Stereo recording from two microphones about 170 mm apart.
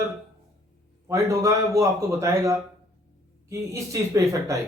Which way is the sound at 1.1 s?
20° right (ahead or behind).